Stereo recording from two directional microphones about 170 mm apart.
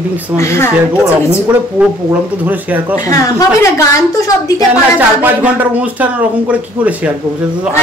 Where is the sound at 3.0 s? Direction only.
20° left (ahead or behind).